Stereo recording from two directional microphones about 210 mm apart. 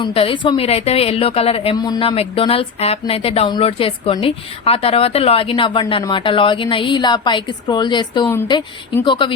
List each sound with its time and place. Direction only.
0.0 s a woman's voice: 25° left (ahead or behind)